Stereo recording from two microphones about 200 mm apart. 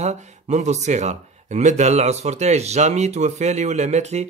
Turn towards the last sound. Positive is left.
turn(degrees=-35)  # may be behind; listen again after turning